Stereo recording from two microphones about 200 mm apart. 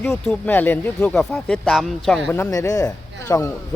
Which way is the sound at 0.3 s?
10° left (ahead or behind).